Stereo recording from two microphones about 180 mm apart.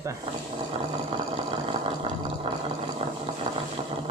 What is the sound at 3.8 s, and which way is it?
Vehicle, 30° right (ahead or behind).